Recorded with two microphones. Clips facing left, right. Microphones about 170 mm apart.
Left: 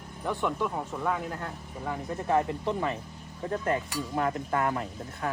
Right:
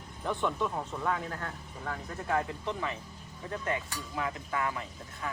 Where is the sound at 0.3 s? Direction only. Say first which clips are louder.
Left 2 dB; 10° left (ahead or behind).